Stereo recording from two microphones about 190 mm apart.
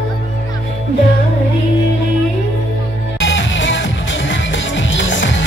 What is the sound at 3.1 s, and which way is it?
Music, 80° left.